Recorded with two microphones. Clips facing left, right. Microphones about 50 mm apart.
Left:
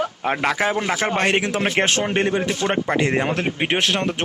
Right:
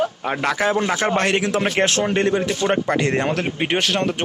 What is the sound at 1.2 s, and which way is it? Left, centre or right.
A man's voice, left.